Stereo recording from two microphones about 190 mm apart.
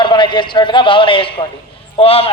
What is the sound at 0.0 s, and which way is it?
A man's voice, 25° left (ahead or behind).